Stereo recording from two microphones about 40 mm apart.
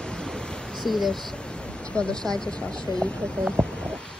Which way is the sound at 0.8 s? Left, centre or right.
Centre.